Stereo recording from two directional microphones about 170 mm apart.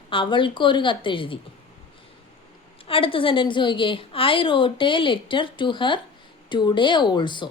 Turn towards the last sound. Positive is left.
turn(degrees=25)  # may be behind; listen again after turning